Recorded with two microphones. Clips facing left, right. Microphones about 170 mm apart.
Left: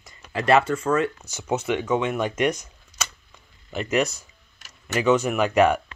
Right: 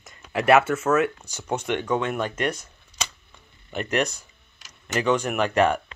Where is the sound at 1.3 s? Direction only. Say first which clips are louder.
Left 2 dB; 5° left (ahead or behind).